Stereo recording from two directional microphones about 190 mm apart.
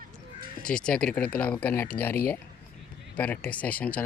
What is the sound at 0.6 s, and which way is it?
Speech, 5° left (ahead or behind).